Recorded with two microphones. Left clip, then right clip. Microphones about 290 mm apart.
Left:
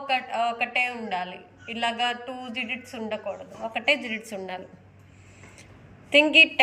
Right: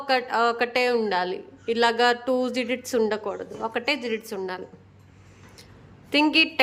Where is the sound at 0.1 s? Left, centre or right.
Centre.